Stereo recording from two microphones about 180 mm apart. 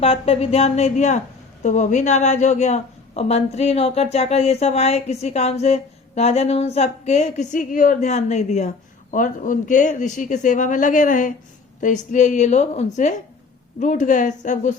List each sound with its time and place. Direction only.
0.0 s a woman's voice: 35° left (ahead or behind)